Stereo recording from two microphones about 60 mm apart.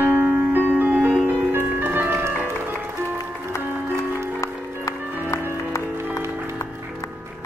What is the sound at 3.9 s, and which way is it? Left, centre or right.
Music, left.